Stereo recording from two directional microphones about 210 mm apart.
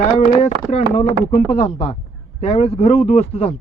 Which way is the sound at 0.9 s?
30° left (ahead or behind).